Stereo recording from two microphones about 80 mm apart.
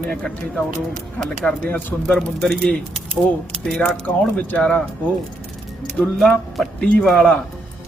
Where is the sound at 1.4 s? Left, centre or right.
Left.